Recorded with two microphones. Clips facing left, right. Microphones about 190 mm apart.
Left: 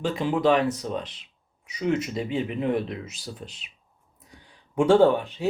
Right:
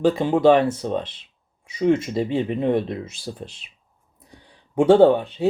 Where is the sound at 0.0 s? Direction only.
25° right (ahead or behind).